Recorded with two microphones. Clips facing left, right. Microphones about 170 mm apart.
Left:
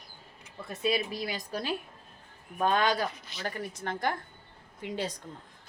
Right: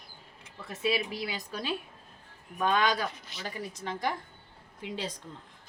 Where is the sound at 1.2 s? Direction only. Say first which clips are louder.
Left 2 dB; 45° left (ahead or behind).